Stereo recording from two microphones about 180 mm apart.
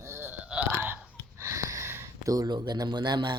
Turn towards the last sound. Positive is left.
turn(degrees=-25)  # may be behind; listen again after turning